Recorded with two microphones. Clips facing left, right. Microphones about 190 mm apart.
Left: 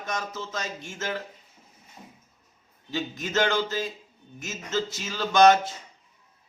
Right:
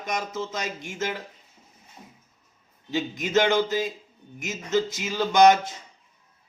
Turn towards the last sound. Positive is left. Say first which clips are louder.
# right 1 dB
turn(degrees=-20)  # may be behind; listen again after turning